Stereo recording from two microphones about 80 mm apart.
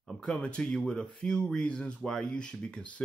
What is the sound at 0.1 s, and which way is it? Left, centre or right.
Speech, centre.